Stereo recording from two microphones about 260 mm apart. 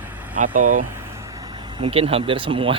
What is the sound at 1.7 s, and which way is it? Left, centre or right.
Speech, right.